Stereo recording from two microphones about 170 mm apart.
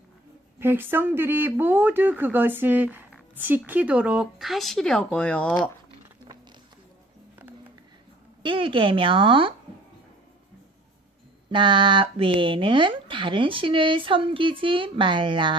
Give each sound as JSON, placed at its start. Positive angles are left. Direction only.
{"t": 0.6, "sound": "speech", "side_deg": -10}
{"t": 8.4, "sound": "a woman's voice", "side_deg": -30}
{"t": 11.5, "sound": "speech", "side_deg": -30}